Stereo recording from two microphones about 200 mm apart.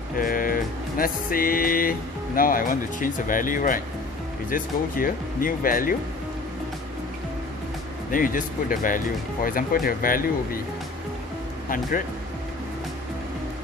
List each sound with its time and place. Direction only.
0.2 s music: 45° left (ahead or behind)
8.1 s music: 45° left (ahead or behind)